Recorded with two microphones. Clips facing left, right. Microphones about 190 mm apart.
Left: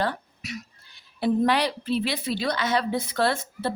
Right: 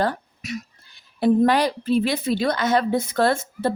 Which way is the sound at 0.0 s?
45° right (ahead or behind).